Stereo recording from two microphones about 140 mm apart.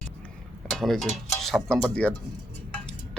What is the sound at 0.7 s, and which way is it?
Speech, centre (ahead or behind).